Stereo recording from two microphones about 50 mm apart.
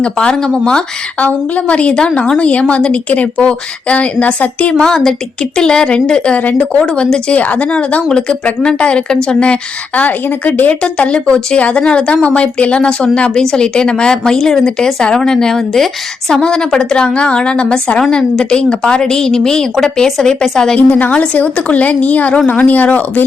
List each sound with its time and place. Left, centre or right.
0.0 s a woman's voice: centre
1.2 s speech: left
4.8 s a woman's voice: centre
6.4 s a woman's voice: left
10.9 s a woman's voice: centre
20.7 s a woman's voice: left